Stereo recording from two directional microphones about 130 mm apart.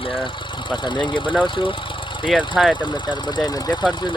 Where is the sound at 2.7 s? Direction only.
35° left (ahead or behind).